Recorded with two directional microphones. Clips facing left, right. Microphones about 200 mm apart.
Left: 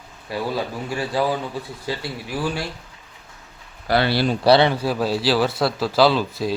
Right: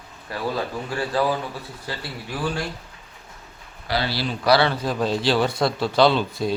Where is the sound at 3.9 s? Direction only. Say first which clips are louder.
Left 6 dB; 60° left (ahead or behind).